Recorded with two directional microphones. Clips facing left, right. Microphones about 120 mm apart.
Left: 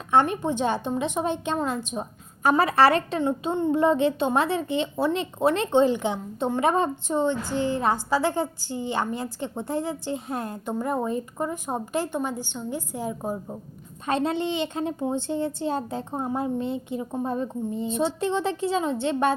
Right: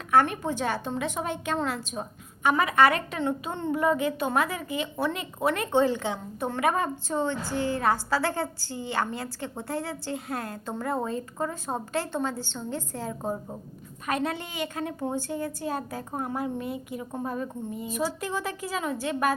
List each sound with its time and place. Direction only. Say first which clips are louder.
0.1 s a woman's voice: left 2 dB; 25° left (ahead or behind)
2.4 s a woman's voice: left 2 dB; 35° left (ahead or behind)
3.2 s a woman's voice: left 5 dB; 20° left (ahead or behind)
14.1 s a woman's voice: left 5 dB; 25° left (ahead or behind)